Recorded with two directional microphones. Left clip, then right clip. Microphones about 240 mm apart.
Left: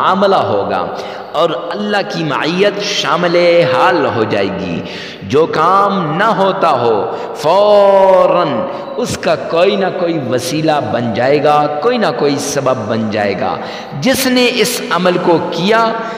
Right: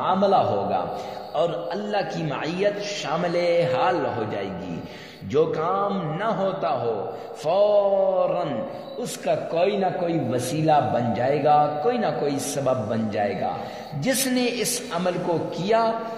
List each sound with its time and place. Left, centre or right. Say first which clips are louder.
0.0 s a man's voice: left 9 dB; left